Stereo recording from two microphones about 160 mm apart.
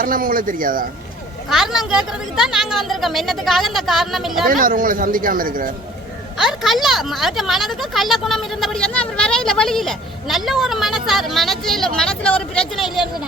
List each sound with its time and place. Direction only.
0.0 s a woman's voice: 60° right (ahead or behind)
1.5 s speech: centre (ahead or behind)
4.4 s a woman's voice: 60° right (ahead or behind)
6.3 s speech: centre (ahead or behind)